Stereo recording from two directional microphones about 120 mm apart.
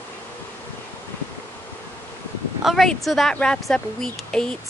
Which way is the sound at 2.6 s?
Centre (ahead or behind).